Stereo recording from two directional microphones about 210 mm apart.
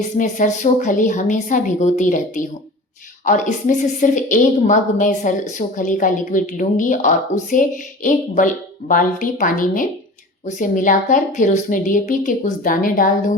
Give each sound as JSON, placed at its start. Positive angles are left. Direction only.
{"t": 0.2, "sound": "speech", "side_deg": 35}